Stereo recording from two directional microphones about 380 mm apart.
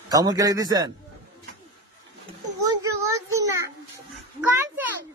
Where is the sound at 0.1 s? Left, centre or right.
Centre.